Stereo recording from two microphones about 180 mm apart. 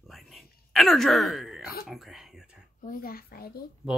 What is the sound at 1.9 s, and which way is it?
Oink, centre (ahead or behind).